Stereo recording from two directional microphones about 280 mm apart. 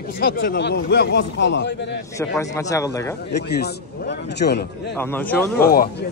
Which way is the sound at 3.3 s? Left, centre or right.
Left.